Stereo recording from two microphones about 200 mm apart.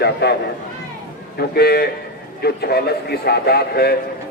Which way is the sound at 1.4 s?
50° left (ahead or behind).